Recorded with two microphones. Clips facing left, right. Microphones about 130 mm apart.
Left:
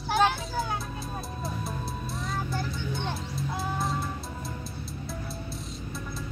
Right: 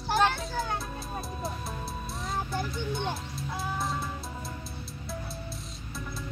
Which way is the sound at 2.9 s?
Centre (ahead or behind).